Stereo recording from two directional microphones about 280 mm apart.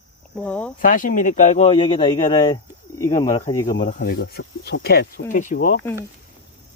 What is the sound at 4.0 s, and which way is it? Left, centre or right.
Speech, left.